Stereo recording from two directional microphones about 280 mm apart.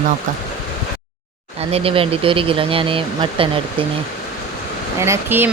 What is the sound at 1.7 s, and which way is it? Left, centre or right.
Speech, centre.